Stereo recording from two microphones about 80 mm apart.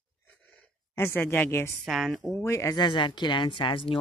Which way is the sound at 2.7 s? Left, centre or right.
Left.